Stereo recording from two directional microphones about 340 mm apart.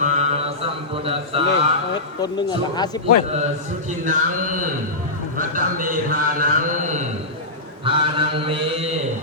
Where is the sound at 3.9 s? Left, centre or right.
Right.